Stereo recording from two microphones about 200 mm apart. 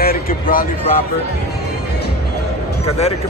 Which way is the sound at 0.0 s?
45° left (ahead or behind).